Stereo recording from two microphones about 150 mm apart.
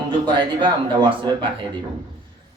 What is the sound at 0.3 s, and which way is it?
A man's voice, 30° right (ahead or behind).